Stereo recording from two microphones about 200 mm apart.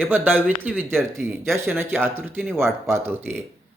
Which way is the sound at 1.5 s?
10° right (ahead or behind).